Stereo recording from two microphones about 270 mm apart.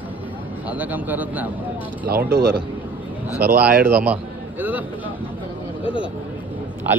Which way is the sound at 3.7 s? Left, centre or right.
Right.